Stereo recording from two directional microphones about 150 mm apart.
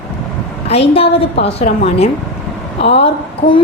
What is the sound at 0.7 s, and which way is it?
Speech, 40° left (ahead or behind).